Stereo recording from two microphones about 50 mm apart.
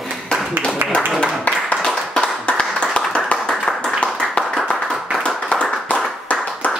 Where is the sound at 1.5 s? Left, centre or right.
Left.